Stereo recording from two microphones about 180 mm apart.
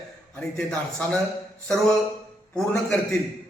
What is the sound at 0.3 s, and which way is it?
Speech, 5° left (ahead or behind).